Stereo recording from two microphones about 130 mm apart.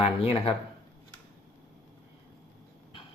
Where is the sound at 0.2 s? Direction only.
50° left (ahead or behind).